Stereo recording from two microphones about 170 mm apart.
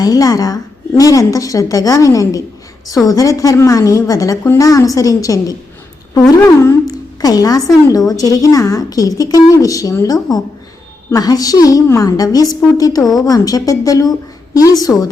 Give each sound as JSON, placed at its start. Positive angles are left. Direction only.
{"t": 0.0, "sound": "a woman's voice", "side_deg": 20}